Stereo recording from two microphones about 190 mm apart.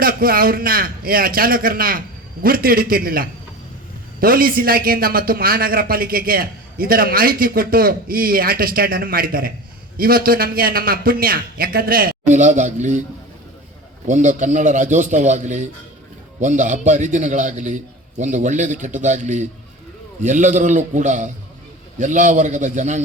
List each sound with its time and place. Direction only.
0.0 s a man's voice: 50° right (ahead or behind)
14.1 s a man's voice: 40° right (ahead or behind)